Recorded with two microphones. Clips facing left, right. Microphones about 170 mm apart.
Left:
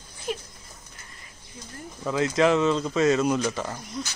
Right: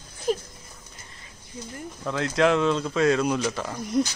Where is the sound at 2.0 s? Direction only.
5° left (ahead or behind).